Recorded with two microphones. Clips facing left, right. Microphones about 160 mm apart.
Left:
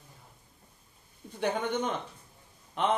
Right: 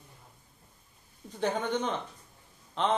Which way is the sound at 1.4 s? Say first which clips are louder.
Even; 10° left (ahead or behind).